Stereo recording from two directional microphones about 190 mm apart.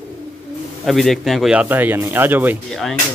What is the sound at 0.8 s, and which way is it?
Speech, centre (ahead or behind).